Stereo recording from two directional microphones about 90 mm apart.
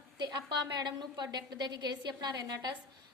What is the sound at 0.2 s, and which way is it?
A woman's voice, 55° right (ahead or behind).